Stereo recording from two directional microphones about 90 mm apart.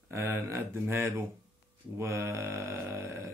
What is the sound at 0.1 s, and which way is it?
Speech, 25° right (ahead or behind).